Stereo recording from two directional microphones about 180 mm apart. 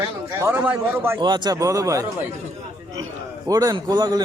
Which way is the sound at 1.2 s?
25° right (ahead or behind).